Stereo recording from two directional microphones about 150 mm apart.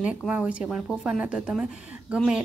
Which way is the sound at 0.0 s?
10° right (ahead or behind).